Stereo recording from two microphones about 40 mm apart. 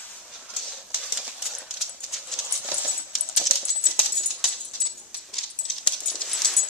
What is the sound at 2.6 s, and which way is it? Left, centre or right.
Dog, right.